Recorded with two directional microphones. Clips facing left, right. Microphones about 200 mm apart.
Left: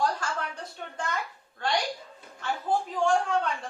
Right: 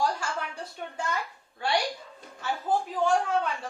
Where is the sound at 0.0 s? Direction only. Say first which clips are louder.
Even; 10° right (ahead or behind).